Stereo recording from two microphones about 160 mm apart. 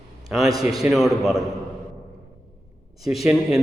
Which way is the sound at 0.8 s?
Centre (ahead or behind).